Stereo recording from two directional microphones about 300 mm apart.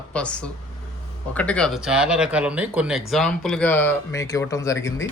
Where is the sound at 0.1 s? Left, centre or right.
Centre.